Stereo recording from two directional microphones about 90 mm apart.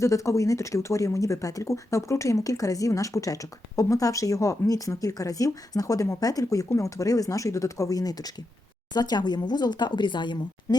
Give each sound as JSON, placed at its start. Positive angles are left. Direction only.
{"t": 0.0, "sound": "speech", "side_deg": 35}